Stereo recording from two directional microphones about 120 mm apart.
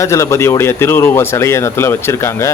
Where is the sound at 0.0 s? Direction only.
25° left (ahead or behind).